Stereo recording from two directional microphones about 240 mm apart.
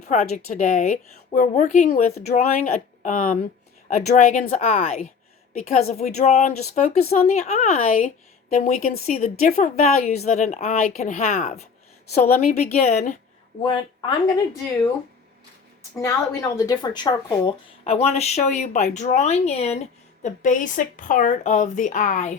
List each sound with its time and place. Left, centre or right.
0.0 s a woman's voice: left
16.0 s a woman's voice: centre; by 22.4 s left